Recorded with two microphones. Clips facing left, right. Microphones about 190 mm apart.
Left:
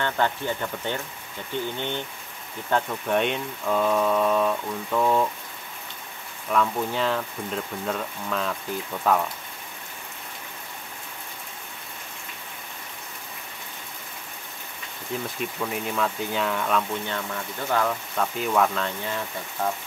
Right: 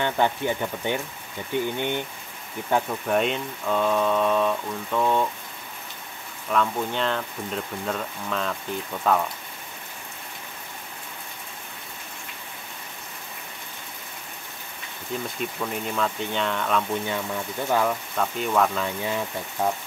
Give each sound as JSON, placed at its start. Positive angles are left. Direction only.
{"t": 0.0, "sound": "speech", "side_deg": -15}
{"t": 6.5, "sound": "speech", "side_deg": 5}
{"t": 15.2, "sound": "speech", "side_deg": 0}
{"t": 17.1, "sound": "speech", "side_deg": -10}
{"t": 18.1, "sound": "speech", "side_deg": 0}